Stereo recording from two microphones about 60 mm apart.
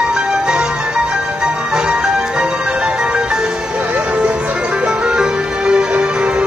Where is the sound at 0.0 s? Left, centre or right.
Centre.